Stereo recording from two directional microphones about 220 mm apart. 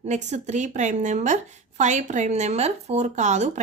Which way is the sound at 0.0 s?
30° right (ahead or behind).